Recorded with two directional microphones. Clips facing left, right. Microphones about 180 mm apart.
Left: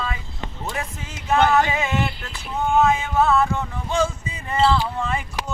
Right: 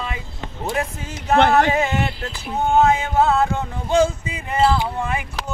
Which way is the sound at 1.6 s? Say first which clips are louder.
Right 3 dB; 45° right (ahead or behind).